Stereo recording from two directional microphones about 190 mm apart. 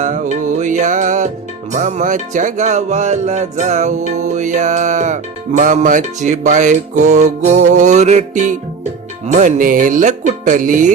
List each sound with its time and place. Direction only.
0.0 s music: 40° right (ahead or behind)